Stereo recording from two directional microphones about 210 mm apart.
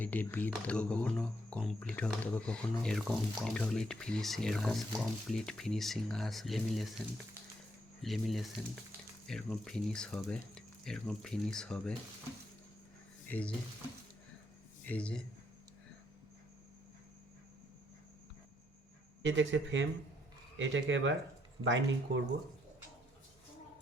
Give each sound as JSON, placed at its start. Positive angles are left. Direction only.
{"t": 0.0, "sound": "speech", "side_deg": 10}
{"t": 8.0, "sound": "speech", "side_deg": 0}
{"t": 13.2, "sound": "speech", "side_deg": 5}
{"t": 14.8, "sound": "speech", "side_deg": 5}
{"t": 19.2, "sound": "speech", "side_deg": -60}